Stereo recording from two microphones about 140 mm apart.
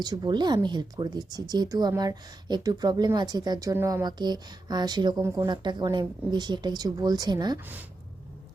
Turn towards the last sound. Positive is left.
turn(degrees=-15)  # may be behind; listen again after turning